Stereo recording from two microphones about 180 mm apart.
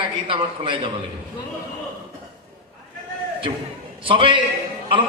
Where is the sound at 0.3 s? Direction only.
30° right (ahead or behind).